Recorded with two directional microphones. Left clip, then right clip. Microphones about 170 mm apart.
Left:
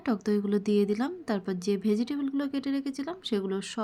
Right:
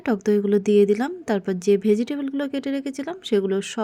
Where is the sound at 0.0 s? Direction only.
25° right (ahead or behind).